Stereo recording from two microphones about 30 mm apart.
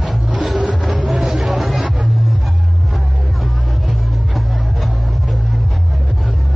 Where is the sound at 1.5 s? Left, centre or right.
Centre.